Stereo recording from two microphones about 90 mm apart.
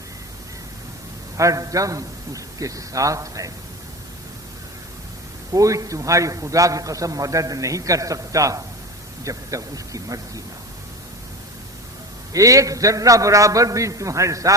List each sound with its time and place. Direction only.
1.4 s a man's voice: 35° right (ahead or behind)
5.5 s a man's voice: 40° right (ahead or behind)
12.3 s a man's voice: 40° right (ahead or behind)